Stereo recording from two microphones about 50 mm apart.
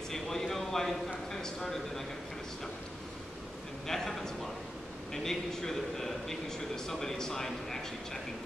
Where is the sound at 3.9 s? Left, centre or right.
Centre.